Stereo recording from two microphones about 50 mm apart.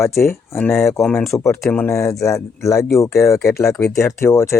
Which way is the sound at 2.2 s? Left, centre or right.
Left.